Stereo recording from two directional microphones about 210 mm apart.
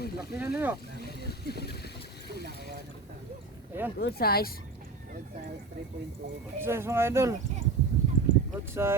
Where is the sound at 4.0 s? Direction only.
50° left (ahead or behind).